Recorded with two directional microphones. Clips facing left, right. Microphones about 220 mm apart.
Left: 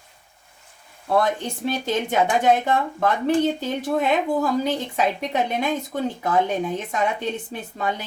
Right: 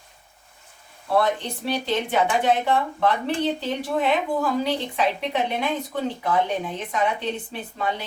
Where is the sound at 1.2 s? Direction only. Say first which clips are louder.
Even; 45° left (ahead or behind).